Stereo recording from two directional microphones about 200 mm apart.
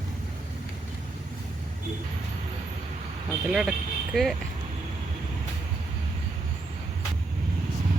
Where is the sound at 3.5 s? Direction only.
Centre (ahead or behind).